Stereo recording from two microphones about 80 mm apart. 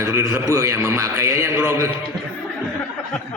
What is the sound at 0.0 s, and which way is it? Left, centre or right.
A man's voice, right.